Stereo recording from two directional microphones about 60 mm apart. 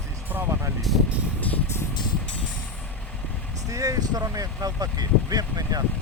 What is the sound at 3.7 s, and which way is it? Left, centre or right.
Speech, right.